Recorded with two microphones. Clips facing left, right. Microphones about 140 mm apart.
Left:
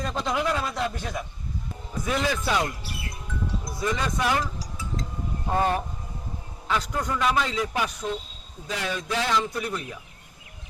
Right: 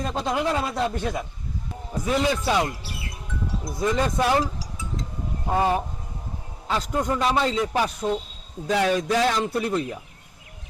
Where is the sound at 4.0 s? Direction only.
35° right (ahead or behind).